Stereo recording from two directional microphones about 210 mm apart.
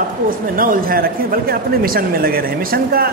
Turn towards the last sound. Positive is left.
turn(degrees=-45)  # may be behind; listen again after turning